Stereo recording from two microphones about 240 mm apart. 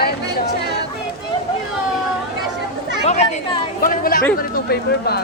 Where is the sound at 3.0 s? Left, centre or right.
Left.